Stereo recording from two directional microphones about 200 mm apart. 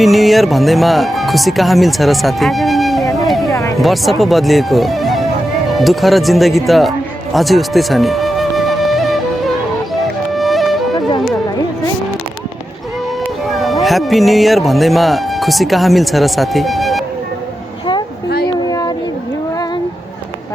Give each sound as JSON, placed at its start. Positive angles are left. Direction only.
{"t": 0.0, "sound": "speech", "side_deg": 0}
{"t": 3.2, "sound": "music", "side_deg": 0}
{"t": 3.5, "sound": "music", "side_deg": 15}
{"t": 3.8, "sound": "speech", "side_deg": 0}
{"t": 7.3, "sound": "music", "side_deg": 0}
{"t": 10.3, "sound": "music", "side_deg": 0}
{"t": 13.5, "sound": "music", "side_deg": 0}
{"t": 13.8, "sound": "speech", "side_deg": 0}
{"t": 18.4, "sound": "a sound", "side_deg": 20}